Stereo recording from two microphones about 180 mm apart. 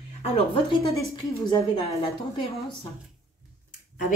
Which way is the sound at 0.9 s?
20° left (ahead or behind).